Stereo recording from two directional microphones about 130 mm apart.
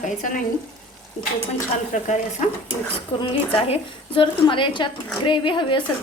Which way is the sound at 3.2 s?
40° left (ahead or behind).